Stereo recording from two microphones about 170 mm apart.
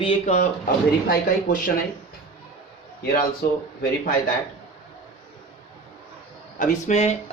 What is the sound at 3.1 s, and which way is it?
Speech, 65° left (ahead or behind).